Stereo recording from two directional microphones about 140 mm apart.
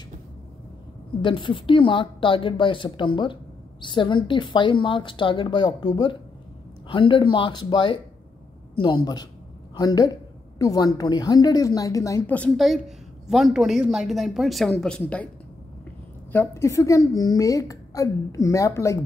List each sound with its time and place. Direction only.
1.2 s a woman's voice: 35° left (ahead or behind)
12.3 s speech: 10° left (ahead or behind)
12.5 s a woman's voice: centre (ahead or behind)
16.3 s a woman's voice: 15° left (ahead or behind)